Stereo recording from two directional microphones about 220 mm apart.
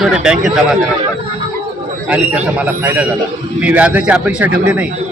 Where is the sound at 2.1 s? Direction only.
5° right (ahead or behind).